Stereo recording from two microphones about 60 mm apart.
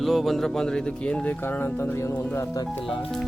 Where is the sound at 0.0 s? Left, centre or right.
Centre.